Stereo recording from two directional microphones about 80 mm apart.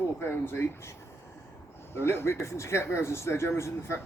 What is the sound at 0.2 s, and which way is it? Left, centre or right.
Speech, left.